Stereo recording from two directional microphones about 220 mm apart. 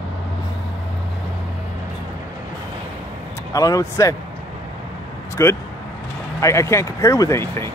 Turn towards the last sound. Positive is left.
turn(degrees=10)  # may be behind; listen again after turning